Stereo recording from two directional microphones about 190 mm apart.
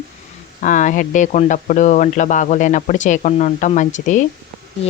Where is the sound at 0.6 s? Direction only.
40° left (ahead or behind).